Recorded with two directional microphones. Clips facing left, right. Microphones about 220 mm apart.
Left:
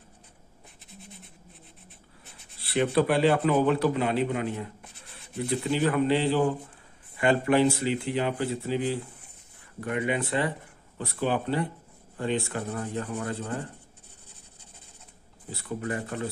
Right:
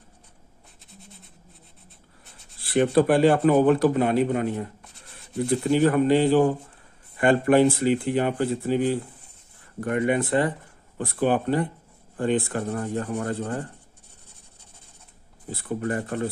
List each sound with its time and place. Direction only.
2.6 s a man's voice: 45° right (ahead or behind)
15.5 s a man's voice: 50° right (ahead or behind)